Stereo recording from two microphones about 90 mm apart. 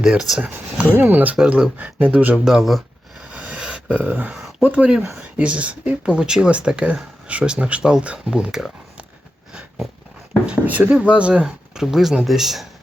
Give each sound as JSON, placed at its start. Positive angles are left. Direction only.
{"t": 0.0, "sound": "speech", "side_deg": -5}
{"t": 2.4, "sound": "a sound", "side_deg": 0}
{"t": 3.2, "sound": "a sound", "side_deg": -15}
{"t": 4.6, "sound": "speech", "side_deg": -15}
{"t": 9.5, "sound": "cat", "side_deg": -10}
{"t": 10.4, "sound": "speech", "side_deg": -15}